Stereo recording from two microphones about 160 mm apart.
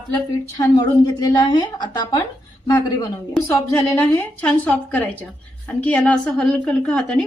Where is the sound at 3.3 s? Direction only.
10° left (ahead or behind).